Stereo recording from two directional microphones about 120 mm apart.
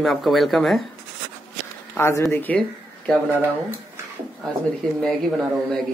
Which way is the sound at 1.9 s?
25° left (ahead or behind).